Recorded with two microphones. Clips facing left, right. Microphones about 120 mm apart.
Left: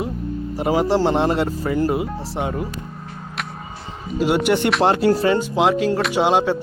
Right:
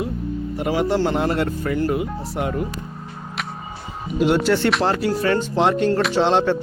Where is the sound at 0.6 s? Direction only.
35° left (ahead or behind).